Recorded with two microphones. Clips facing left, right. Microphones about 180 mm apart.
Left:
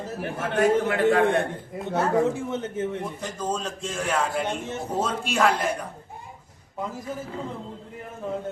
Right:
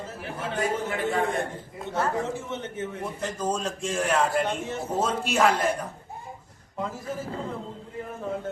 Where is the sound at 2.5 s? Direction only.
35° left (ahead or behind).